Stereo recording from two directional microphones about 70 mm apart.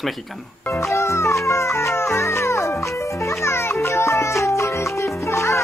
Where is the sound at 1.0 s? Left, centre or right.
Left.